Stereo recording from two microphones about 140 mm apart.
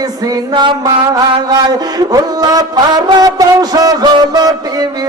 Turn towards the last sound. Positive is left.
turn(degrees=-25)  # may be behind; listen again after turning